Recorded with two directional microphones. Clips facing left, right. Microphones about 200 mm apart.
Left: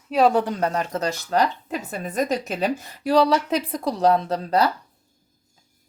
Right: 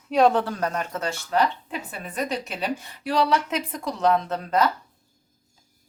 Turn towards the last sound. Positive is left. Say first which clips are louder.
# left 2 dB
turn(degrees=35)  # may be behind; listen again after turning